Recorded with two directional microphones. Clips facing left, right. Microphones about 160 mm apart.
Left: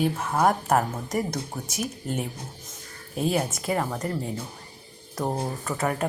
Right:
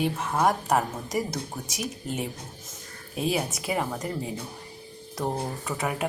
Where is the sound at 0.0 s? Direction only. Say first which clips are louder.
Left 2 dB; centre (ahead or behind).